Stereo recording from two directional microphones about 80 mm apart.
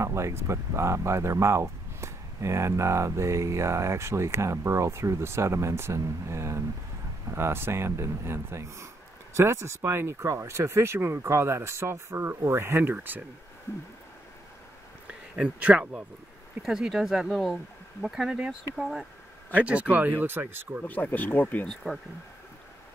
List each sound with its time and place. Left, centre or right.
0.0 s speech: right
15.0 s speech: centre
19.6 s speech: centre
20.8 s speech: left
21.6 s speech: centre